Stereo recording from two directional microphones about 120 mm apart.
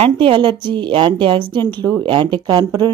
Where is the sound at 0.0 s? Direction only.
45° right (ahead or behind).